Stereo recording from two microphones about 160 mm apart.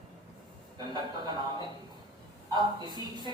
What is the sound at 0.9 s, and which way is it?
Speech, 25° right (ahead or behind).